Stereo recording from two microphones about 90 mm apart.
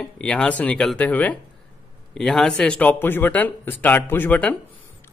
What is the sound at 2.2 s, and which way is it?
Speech, 5° left (ahead or behind).